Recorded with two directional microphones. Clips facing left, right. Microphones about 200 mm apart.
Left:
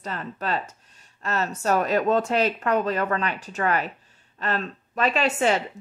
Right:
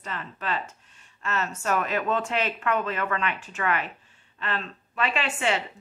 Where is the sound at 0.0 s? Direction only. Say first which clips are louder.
Left 4 dB; 40° left (ahead or behind).